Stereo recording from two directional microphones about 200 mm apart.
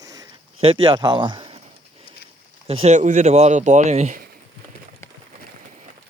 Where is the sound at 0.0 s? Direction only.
20° right (ahead or behind).